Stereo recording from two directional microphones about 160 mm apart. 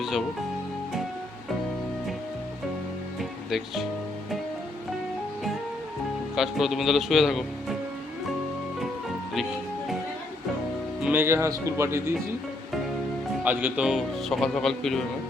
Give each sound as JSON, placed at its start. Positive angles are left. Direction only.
{"t": 3.2, "sound": "music", "side_deg": 0}
{"t": 6.3, "sound": "speech", "side_deg": 0}
{"t": 11.0, "sound": "speech", "side_deg": -15}
{"t": 13.4, "sound": "speech", "side_deg": -10}